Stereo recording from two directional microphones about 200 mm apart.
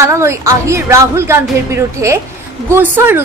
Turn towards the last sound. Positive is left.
turn(degrees=-10)  # may be behind; listen again after turning